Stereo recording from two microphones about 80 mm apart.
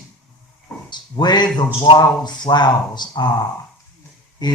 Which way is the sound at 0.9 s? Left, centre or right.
Left.